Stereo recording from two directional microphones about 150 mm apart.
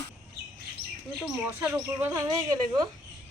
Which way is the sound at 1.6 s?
10° right (ahead or behind).